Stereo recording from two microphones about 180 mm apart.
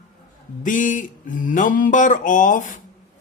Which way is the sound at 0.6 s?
45° left (ahead or behind).